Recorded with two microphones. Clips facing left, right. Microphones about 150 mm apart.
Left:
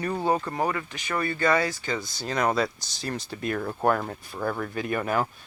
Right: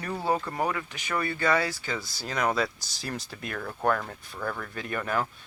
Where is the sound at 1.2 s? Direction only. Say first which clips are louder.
Left 3 dB; 10° right (ahead or behind).